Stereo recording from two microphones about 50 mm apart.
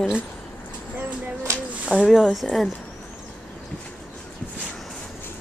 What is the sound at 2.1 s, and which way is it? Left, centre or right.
Speech, centre.